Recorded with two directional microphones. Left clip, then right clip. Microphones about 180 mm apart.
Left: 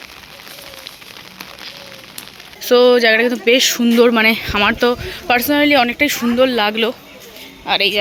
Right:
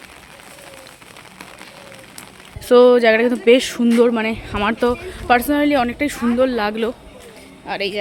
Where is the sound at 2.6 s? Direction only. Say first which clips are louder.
Even; 15° right (ahead or behind).